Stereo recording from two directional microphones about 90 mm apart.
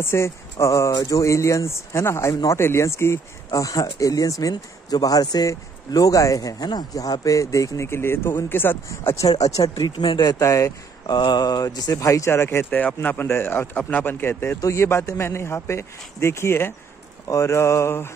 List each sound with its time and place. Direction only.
0.0 s speech: 30° left (ahead or behind)
9.3 s speech: 45° left (ahead or behind)
10.0 s speech: 65° left (ahead or behind)
10.4 s speech: 35° left (ahead or behind)
11.1 s speech: 55° left (ahead or behind); by 18.1 s 30° left (ahead or behind)